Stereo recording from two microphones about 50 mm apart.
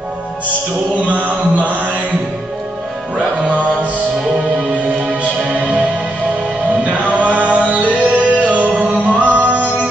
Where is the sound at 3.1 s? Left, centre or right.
Right.